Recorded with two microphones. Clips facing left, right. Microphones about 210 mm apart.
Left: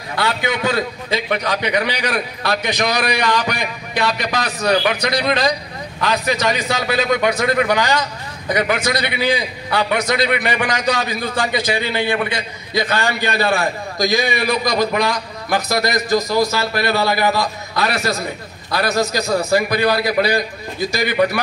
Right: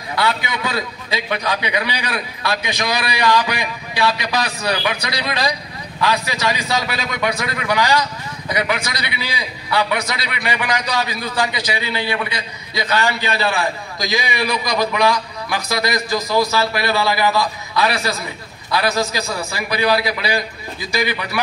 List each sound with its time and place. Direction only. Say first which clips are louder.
0.1 s a man's voice: left 1 dB; 45° left (ahead or behind)